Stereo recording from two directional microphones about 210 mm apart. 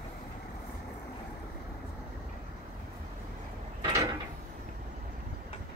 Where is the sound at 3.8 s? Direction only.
15° right (ahead or behind).